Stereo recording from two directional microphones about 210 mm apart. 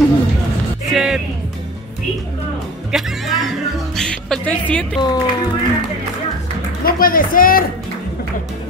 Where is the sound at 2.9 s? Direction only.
Centre (ahead or behind).